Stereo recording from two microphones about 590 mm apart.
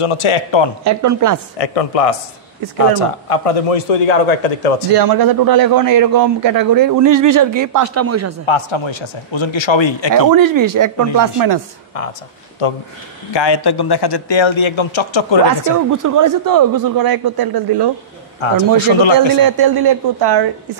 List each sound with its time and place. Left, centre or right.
0.0 s a man's voice: left
0.8 s a woman's voice: right
1.6 s a man's voice: left
4.9 s a man's voice: right
8.5 s a man's voice: left
10.1 s a man's voice: right
12.6 s a man's voice: left
13.3 s a man's voice: left
15.9 s a man's voice: right
18.9 s a man's voice: left
19.1 s a man's voice: right